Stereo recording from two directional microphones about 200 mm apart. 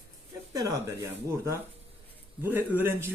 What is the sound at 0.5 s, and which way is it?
Speech, 15° right (ahead or behind).